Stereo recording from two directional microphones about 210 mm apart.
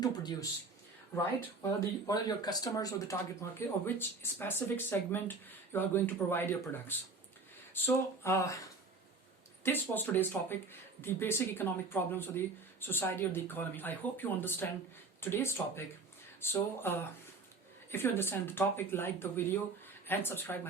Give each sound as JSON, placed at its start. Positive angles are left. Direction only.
{"t": 0.0, "sound": "a sound", "side_deg": 20}
{"t": 1.1, "sound": "speech", "side_deg": 10}
{"t": 9.6, "sound": "speech", "side_deg": 10}